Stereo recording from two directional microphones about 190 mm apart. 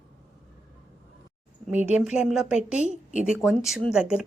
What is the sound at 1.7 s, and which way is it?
A woman's voice, 5° right (ahead or behind).